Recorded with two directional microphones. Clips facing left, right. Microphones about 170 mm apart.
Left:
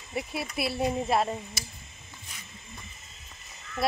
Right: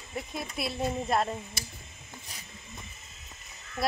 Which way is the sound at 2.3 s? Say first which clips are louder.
Even; 35° right (ahead or behind).